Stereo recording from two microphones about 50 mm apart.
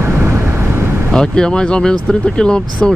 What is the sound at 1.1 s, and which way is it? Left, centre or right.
Speech, centre.